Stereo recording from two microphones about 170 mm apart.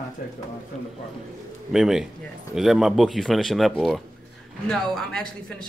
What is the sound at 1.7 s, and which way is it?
A woman's voice, centre (ahead or behind).